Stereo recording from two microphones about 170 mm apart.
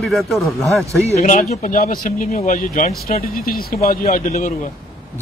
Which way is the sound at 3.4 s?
60° left (ahead or behind).